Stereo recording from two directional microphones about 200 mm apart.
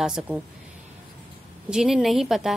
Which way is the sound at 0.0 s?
5° right (ahead or behind).